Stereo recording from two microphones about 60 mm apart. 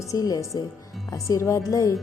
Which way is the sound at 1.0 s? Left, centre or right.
Left.